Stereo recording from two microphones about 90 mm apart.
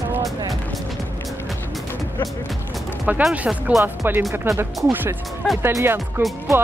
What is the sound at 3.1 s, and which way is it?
Speech, 15° right (ahead or behind).